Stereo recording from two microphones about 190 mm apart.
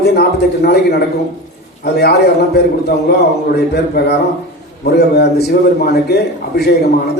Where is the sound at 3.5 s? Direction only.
55° left (ahead or behind).